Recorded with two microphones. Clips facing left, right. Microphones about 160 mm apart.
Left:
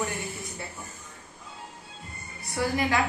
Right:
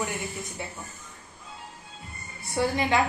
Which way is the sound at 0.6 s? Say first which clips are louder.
Right 2 dB; 20° right (ahead or behind).